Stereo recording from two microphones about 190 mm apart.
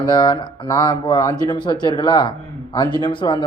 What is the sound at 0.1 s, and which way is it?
Speech, 20° left (ahead or behind).